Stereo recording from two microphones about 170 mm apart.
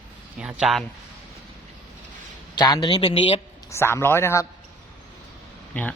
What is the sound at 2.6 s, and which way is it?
Speech, 25° left (ahead or behind).